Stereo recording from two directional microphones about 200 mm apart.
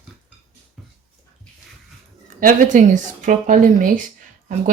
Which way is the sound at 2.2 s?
40° right (ahead or behind).